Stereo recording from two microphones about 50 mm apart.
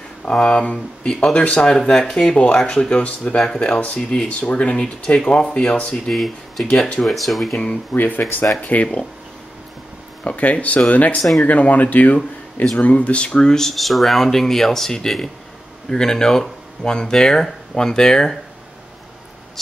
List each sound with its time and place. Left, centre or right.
0.4 s speech: left
3.4 s speech: centre
6.1 s speech: centre
6.6 s speech: centre
7.0 s speech: centre
7.5 s speech: left
8.5 s speech: left
10.2 s speech: left
11.1 s speech: centre
11.4 s speech: left; by 18.4 s centre